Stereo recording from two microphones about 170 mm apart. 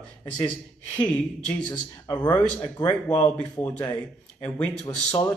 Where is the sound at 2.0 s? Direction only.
25° left (ahead or behind).